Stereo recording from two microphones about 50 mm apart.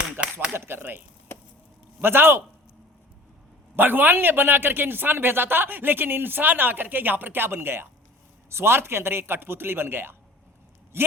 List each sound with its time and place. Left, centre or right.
0.2 s a sound: right
1.3 s chop: left
2.0 s a man's voice: right
3.8 s a man's voice: right